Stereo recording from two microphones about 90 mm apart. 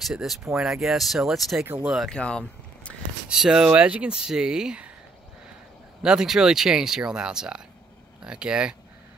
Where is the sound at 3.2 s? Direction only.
5° right (ahead or behind).